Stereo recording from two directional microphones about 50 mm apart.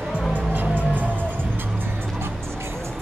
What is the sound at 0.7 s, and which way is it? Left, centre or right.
Music, right.